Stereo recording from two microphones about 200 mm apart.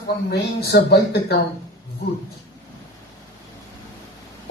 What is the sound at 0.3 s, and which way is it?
Speech, 55° left (ahead or behind).